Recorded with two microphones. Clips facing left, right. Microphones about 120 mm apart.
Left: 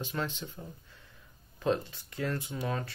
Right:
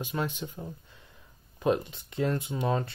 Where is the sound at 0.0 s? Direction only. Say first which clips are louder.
Right 3 dB; 15° right (ahead or behind).